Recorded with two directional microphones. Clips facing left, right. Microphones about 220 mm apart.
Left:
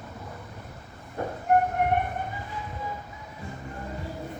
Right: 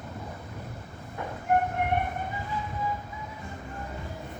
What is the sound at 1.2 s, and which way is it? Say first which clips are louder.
Train: left 5 dB; 40° left (ahead or behind).